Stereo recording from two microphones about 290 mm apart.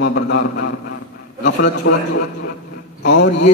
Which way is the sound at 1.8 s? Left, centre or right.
Left.